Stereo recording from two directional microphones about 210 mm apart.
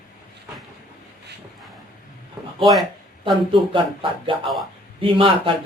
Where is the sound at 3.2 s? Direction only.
25° right (ahead or behind).